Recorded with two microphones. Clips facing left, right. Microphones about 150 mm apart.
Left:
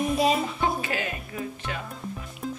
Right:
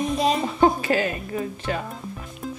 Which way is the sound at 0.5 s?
40° right (ahead or behind).